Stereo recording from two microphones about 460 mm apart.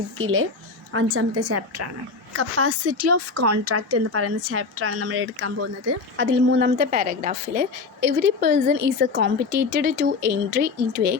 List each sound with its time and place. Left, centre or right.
0.2 s a woman's voice: right